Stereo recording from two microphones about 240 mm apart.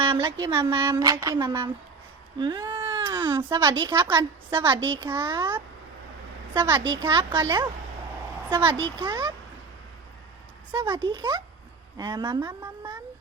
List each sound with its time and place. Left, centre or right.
0.0 s a woman's voice: centre
10.7 s a woman's voice: centre